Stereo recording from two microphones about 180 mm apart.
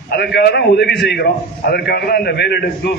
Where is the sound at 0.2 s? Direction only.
65° left (ahead or behind).